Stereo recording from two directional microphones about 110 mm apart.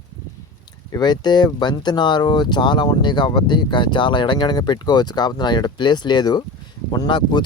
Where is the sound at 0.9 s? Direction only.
40° left (ahead or behind).